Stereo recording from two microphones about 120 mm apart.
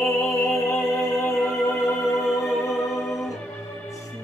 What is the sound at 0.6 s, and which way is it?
Music, 20° left (ahead or behind).